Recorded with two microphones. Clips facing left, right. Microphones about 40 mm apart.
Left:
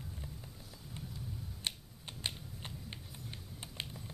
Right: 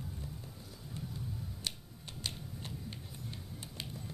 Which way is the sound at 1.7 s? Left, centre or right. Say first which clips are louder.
Left 3 dB; left.